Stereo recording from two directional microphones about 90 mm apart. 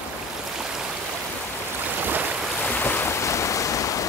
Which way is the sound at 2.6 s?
20° left (ahead or behind).